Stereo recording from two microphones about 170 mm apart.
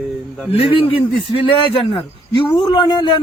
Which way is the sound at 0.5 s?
35° left (ahead or behind).